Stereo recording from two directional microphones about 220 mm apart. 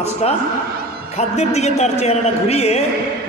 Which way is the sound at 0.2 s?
30° left (ahead or behind).